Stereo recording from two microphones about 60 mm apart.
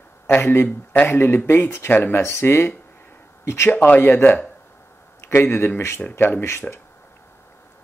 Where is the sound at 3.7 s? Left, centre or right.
Left.